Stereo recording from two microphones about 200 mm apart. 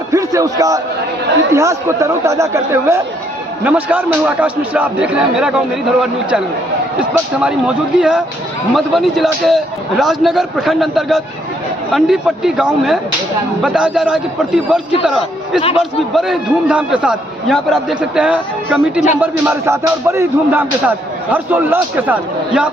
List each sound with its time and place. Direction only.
0.1 s a man's voice: 15° right (ahead or behind)